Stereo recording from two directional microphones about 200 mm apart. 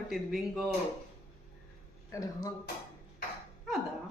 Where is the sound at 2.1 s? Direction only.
15° left (ahead or behind).